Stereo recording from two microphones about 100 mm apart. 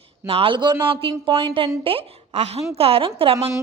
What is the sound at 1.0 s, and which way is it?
A woman's voice, 65° right (ahead or behind).